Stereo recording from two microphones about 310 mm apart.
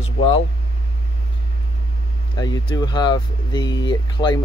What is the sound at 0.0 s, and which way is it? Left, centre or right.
Vehicle, centre.